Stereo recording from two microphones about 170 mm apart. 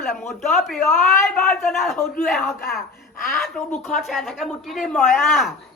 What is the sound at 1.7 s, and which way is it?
Speech, centre (ahead or behind).